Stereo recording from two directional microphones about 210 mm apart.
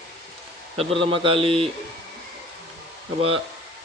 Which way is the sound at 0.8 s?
25° right (ahead or behind).